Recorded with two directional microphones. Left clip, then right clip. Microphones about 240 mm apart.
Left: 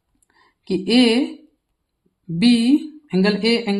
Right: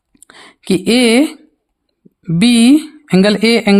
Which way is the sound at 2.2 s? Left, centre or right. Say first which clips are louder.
Right 7 dB; right.